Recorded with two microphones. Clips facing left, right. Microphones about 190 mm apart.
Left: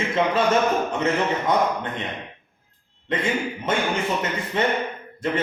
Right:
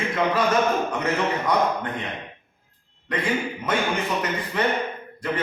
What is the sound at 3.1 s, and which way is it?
A man's voice, 25° left (ahead or behind).